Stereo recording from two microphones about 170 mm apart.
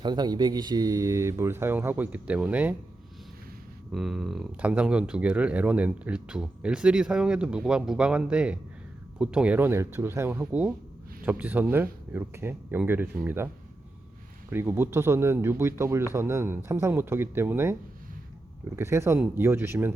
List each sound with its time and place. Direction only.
0.0 s speech: 25° right (ahead or behind); by 2.7 s 10° right (ahead or behind)
3.9 s speech: centre (ahead or behind)
14.5 s speech: 15° right (ahead or behind)
18.8 s speech: 15° right (ahead or behind)